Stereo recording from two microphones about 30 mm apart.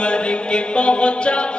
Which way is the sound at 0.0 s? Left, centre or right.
Left.